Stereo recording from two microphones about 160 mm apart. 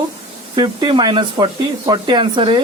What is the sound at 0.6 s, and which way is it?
Speech, 30° right (ahead or behind).